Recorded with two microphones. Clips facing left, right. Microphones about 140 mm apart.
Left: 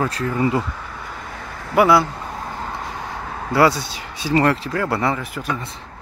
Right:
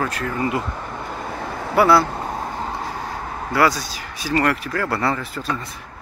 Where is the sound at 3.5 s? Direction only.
25° left (ahead or behind).